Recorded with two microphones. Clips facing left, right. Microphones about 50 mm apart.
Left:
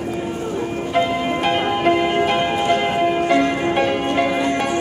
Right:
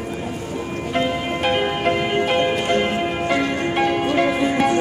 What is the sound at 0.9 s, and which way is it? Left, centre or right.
Music, centre.